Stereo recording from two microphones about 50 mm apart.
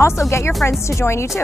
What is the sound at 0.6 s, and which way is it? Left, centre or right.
Speech, left.